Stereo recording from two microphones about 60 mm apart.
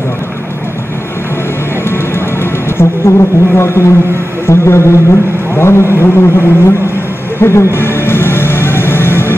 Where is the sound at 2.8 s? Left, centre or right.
Left.